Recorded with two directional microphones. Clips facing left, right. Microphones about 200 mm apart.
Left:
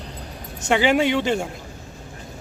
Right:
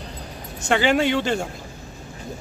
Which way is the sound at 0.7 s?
10° left (ahead or behind).